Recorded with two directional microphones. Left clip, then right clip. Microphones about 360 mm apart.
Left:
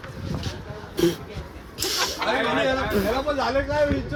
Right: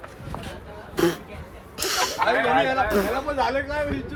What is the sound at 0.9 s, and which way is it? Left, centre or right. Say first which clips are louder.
Speech: even; centre.